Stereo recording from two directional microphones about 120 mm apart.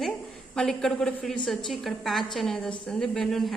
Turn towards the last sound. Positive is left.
turn(degrees=5)  # may be behind; listen again after turning